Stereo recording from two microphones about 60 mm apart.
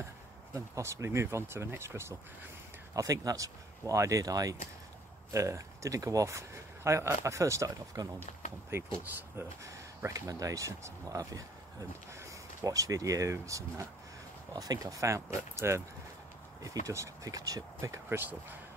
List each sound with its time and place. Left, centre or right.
0.6 s speech: right
2.9 s speech: right
5.3 s speech: right
8.7 s speech: right
10.0 s speech: right
12.6 s speech: right
14.6 s speech: right
16.6 s speech: right
18.1 s speech: right